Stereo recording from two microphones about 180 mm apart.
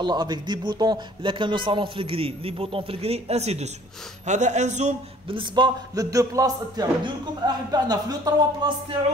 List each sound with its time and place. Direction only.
0.0 s speech: 25° right (ahead or behind)